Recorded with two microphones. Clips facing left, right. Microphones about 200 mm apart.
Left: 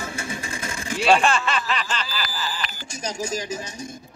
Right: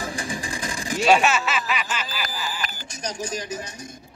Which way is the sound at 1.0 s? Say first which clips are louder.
Even; 10° right (ahead or behind).